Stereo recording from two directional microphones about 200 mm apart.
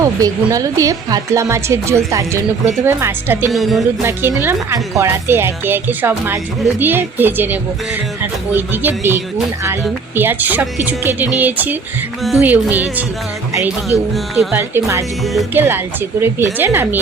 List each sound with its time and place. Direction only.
0.0 s a woman's voice: 15° right (ahead or behind)
3.5 s music: centre (ahead or behind)
4.4 s a woman's voice: 15° right (ahead or behind)
15.2 s music: centre (ahead or behind)
15.5 s a woman's voice: 10° right (ahead or behind)